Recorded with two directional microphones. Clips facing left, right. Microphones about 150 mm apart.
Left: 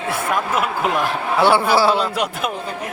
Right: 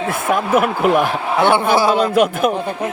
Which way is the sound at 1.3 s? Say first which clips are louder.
Right 1 dB; 20° right (ahead or behind).